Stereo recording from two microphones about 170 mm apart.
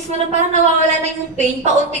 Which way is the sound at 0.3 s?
40° right (ahead or behind).